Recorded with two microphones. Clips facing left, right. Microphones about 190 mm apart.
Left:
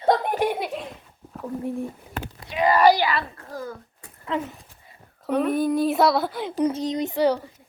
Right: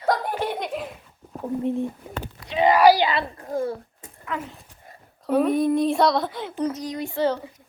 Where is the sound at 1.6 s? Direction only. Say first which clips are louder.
Right 4 dB; 20° right (ahead or behind).